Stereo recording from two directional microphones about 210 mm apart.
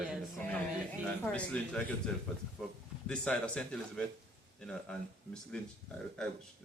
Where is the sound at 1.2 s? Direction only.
5° left (ahead or behind).